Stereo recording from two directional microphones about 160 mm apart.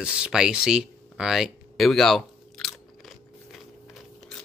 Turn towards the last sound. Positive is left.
turn(degrees=0)  # may be behind; listen again after turning